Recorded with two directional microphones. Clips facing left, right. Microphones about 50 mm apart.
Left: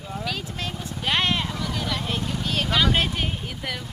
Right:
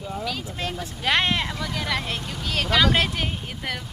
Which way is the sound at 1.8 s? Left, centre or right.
Right.